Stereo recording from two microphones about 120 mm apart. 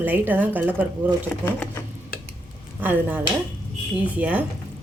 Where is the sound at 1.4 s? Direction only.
15° left (ahead or behind).